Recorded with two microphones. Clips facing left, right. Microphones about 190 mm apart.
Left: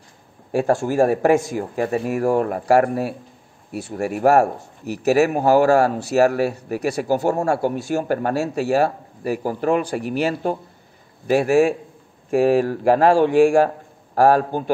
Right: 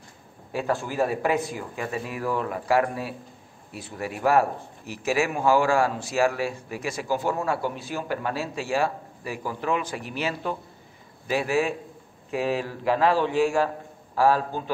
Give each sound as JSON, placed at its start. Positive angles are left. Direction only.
{"t": 0.5, "sound": "a man's voice", "side_deg": 45}